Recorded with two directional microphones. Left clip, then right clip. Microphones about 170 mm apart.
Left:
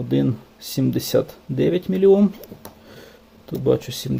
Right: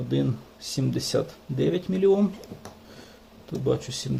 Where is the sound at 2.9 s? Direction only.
45° left (ahead or behind).